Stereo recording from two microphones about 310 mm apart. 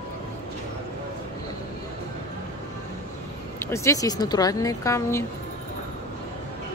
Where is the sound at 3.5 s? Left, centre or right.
Centre.